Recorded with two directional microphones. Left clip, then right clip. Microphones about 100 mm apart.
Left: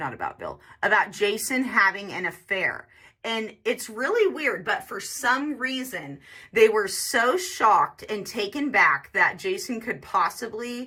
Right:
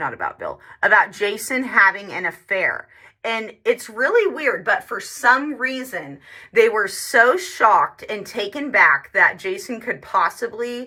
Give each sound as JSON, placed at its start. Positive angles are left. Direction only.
{"t": 0.0, "sound": "speech", "side_deg": 25}